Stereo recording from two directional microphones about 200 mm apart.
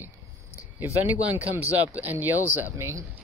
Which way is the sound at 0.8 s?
10° right (ahead or behind).